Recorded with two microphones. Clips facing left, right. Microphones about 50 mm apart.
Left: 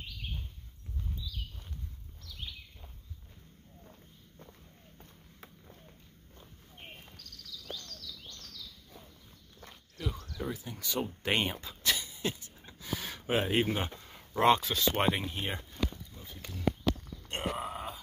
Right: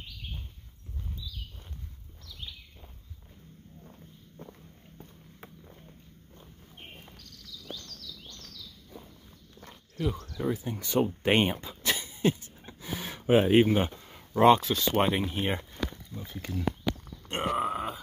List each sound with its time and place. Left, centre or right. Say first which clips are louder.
5.4 s run: right 4 dB; right
7.7 s bird: right 1 dB; centre
10.2 s speech: right 7 dB; right
11.2 s a sound: right 6 dB; right
12.8 s gasp: right 5 dB; centre
13.7 s speech: right 7 dB; centre
15.2 s speech: right 6 dB; centre
16.3 s speech: right 10 dB; right
17.3 s grunt: right 5 dB; right
17.6 s grunt: right 8 dB; right